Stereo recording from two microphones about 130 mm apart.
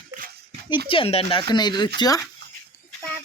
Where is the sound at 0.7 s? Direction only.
45° left (ahead or behind).